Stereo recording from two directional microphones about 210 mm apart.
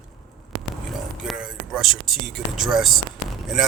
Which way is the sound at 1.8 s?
Centre (ahead or behind).